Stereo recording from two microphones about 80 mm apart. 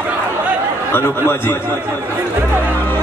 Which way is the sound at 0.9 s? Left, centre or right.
Left.